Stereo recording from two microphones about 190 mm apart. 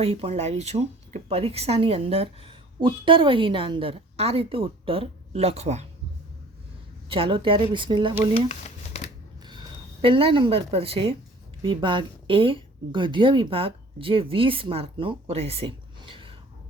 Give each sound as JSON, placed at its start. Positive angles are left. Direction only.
{"t": 0.0, "sound": "speech", "side_deg": -30}
{"t": 7.1, "sound": "a woman's voice", "side_deg": -30}
{"t": 8.3, "sound": "a sound", "side_deg": 35}
{"t": 9.4, "sound": "a woman's voice", "side_deg": -25}